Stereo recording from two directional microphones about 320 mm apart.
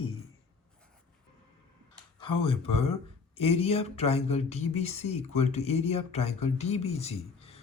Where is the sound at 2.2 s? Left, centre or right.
Centre.